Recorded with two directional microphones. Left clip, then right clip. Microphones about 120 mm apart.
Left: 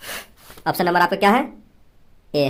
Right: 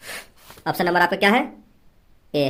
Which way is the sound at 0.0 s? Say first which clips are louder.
Left 3 dB; 35° left (ahead or behind).